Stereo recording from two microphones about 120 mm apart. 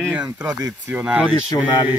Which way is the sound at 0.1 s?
10° right (ahead or behind).